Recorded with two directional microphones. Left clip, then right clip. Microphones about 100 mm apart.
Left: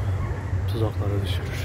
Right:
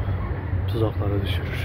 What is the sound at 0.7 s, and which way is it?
Speech, 25° left (ahead or behind).